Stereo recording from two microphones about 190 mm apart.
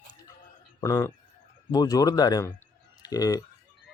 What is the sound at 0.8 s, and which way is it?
Speech, 15° left (ahead or behind).